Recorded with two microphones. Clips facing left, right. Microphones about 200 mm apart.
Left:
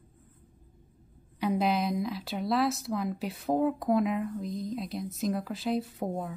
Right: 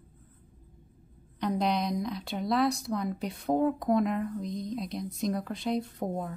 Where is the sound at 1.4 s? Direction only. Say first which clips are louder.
Left 1 dB; 5° left (ahead or behind).